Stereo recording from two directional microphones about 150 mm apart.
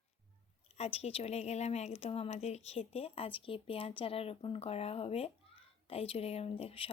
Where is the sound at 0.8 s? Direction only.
45° left (ahead or behind).